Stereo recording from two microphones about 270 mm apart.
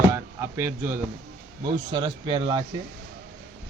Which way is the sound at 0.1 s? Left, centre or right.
Centre.